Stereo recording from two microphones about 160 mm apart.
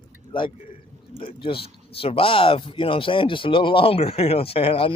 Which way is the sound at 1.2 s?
35° left (ahead or behind).